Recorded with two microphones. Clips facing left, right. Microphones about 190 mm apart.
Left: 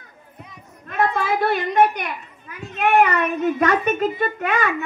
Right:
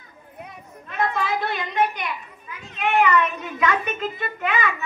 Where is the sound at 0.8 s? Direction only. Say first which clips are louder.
Left 4 dB; 50° left (ahead or behind).